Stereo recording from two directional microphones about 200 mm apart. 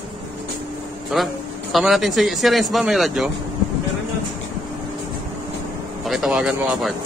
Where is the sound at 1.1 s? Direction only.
Centre (ahead or behind).